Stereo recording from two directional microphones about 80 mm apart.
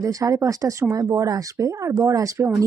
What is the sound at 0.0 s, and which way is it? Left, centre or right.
Speech, right.